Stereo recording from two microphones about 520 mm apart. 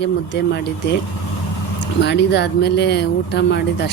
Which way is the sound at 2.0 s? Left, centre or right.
Centre.